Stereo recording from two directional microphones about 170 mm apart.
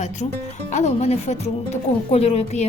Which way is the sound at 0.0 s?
45° left (ahead or behind).